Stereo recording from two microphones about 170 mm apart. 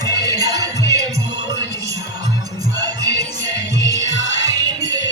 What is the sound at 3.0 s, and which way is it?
Music, 80° left.